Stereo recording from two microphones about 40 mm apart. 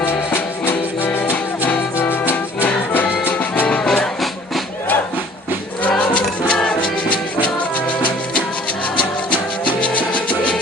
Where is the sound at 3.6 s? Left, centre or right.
Left.